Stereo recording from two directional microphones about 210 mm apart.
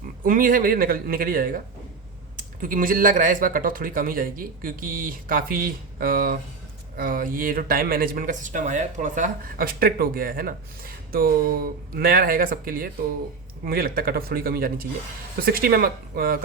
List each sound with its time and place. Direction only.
0.3 s speech: 40° right (ahead or behind)